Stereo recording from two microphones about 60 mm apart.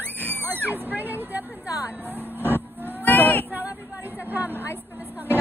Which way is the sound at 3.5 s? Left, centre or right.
Right.